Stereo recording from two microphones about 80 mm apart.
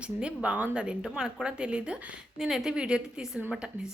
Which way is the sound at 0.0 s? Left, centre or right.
Centre.